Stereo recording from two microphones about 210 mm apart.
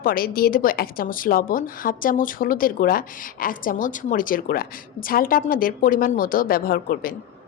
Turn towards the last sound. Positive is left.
turn(degrees=45)  # may be behind; listen again after turning